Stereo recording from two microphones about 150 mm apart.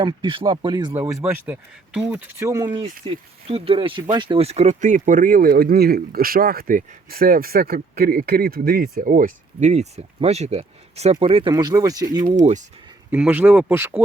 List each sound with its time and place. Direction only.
0.0 s speech: 35° right (ahead or behind)
0.9 s speech: 15° right (ahead or behind)
2.7 s speech: 40° right (ahead or behind)
11.5 s speech: 25° right (ahead or behind)
12.4 s speech: 55° right (ahead or behind)
13.1 s speech: 10° right (ahead or behind)